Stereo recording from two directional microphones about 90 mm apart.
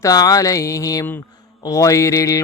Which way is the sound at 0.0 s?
45° left (ahead or behind).